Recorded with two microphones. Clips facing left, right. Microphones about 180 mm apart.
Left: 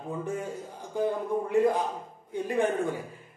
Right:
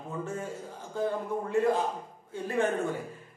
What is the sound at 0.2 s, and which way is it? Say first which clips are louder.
A man's voice: even; 15° left (ahead or behind).